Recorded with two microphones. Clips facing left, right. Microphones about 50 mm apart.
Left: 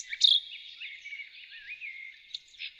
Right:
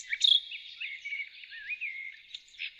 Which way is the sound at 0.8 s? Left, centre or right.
Right.